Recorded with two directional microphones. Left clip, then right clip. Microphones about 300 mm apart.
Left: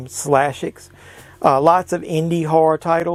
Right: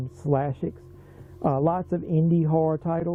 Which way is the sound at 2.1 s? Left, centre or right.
Left.